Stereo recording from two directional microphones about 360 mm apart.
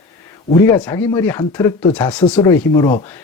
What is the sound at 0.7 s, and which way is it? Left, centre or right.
Speech, centre.